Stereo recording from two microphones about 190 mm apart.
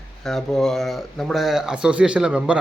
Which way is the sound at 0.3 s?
Centre (ahead or behind).